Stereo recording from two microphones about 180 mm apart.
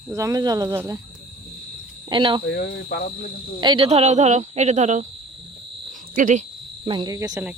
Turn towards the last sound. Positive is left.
turn(degrees=-20)  # may be behind; listen again after turning